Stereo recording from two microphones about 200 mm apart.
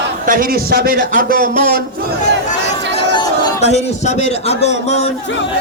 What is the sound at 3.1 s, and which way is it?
Chatter, 20° left (ahead or behind).